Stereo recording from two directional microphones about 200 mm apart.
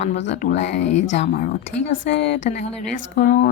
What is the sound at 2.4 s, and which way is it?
Speech, 35° left (ahead or behind).